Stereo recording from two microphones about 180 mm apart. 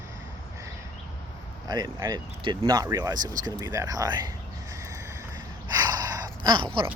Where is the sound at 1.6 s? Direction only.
20° right (ahead or behind).